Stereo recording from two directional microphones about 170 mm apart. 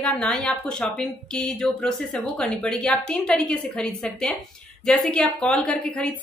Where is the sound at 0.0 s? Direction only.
5° left (ahead or behind).